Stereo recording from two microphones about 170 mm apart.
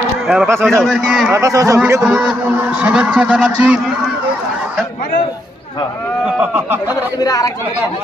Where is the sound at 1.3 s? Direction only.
20° right (ahead or behind).